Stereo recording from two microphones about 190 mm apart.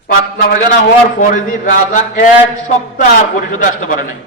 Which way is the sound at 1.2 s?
45° left (ahead or behind).